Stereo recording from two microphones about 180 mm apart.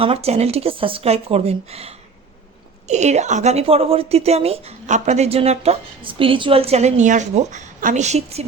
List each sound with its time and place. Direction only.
0.0 s a woman's voice: 35° right (ahead or behind)